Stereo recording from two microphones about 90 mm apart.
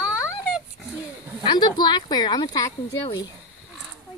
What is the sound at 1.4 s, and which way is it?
Speech, 55° left (ahead or behind).